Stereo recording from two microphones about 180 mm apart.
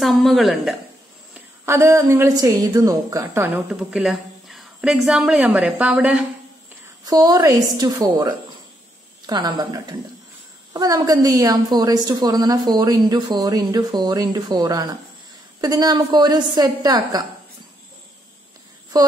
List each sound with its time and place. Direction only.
0.0 s a woman's voice: centre (ahead or behind)
1.3 s a woman's voice: 15° right (ahead or behind)
7.1 s a woman's voice: 20° right (ahead or behind)
18.9 s a woman's voice: 20° right (ahead or behind)